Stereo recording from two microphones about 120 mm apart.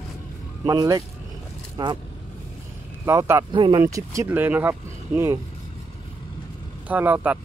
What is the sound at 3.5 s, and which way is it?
Speech, 40° right (ahead or behind).